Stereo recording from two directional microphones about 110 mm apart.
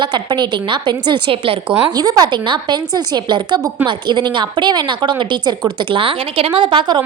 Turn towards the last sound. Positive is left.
turn(degrees=-50)  # may be behind; listen again after turning